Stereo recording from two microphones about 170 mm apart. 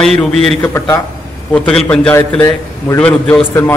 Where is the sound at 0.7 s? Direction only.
15° left (ahead or behind).